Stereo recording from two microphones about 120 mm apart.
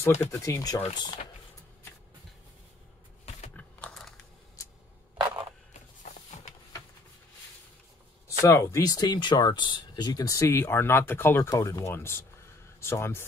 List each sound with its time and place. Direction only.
0.2 s speech: 25° left (ahead or behind)
3.5 s typing: 5° left (ahead or behind)
5.1 s a sound: 35° right (ahead or behind)
8.4 s speech: 25° left (ahead or behind)
11.4 s speech: 30° left (ahead or behind)